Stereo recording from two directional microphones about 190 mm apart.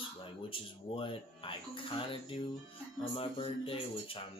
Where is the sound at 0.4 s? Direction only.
25° left (ahead or behind).